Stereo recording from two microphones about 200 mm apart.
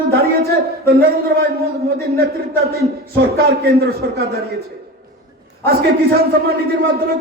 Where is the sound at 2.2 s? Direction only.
50° right (ahead or behind).